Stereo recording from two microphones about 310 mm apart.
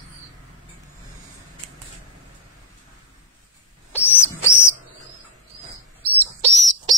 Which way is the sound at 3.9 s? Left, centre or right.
Centre.